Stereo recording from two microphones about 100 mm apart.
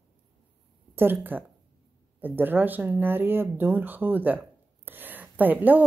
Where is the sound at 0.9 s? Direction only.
20° right (ahead or behind).